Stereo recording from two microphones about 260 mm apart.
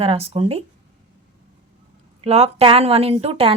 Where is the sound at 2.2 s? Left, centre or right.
Right.